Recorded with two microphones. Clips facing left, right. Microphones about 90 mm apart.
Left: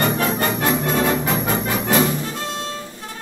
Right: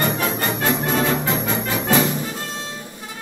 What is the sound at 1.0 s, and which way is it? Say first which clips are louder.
Music: left 1 dB; 25° left (ahead or behind).